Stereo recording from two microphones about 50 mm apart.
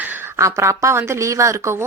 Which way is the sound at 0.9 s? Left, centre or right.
Right.